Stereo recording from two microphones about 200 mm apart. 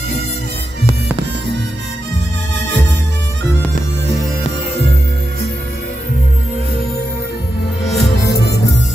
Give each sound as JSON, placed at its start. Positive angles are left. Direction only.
{"t": 8.0, "sound": "music", "side_deg": 55}